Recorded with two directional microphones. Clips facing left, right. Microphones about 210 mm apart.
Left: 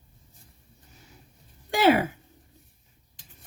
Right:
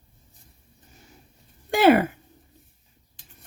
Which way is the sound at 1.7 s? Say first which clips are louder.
Right 4 dB; 55° right (ahead or behind).